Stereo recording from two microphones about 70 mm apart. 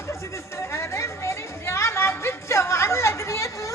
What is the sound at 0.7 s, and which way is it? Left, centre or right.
Music, left.